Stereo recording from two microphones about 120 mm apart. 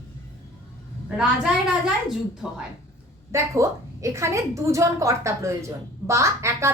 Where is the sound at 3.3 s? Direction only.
25° right (ahead or behind).